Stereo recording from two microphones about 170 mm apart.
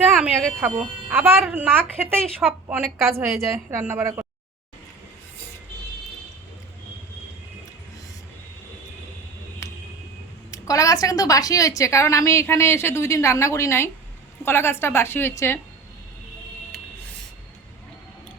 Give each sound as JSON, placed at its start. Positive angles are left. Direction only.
{"t": 0.2, "sound": "a woman's voice", "side_deg": -5}
{"t": 2.0, "sound": "speech", "side_deg": 5}
{"t": 2.5, "sound": "a woman's voice", "side_deg": -10}
{"t": 3.1, "sound": "a woman's voice", "side_deg": -15}
{"t": 10.5, "sound": "a woman's voice", "side_deg": 20}